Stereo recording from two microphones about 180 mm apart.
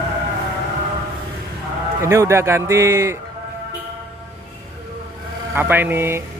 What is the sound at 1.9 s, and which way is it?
A man's voice, 15° right (ahead or behind).